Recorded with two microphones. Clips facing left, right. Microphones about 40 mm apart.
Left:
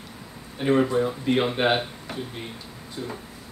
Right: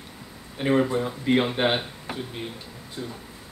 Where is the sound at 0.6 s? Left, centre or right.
Centre.